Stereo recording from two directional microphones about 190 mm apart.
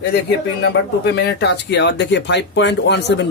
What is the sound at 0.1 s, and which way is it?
A man's voice, 60° left (ahead or behind).